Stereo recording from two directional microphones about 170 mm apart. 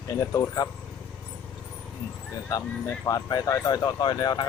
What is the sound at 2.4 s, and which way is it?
Speech, 15° left (ahead or behind).